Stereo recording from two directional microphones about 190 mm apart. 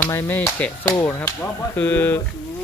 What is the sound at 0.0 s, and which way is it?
Speech, 15° left (ahead or behind).